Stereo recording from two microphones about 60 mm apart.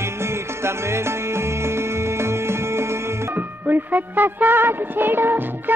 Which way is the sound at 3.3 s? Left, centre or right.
Right.